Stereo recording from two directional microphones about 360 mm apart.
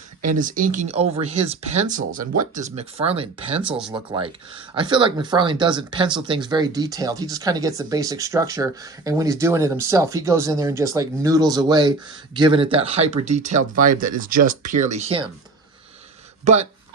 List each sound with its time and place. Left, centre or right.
0.2 s speech: right
3.6 s speech: centre
3.9 s speech: centre
16.4 s speech: centre